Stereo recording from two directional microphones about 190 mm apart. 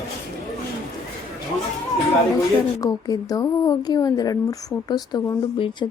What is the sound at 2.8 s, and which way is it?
Speech, 20° left (ahead or behind).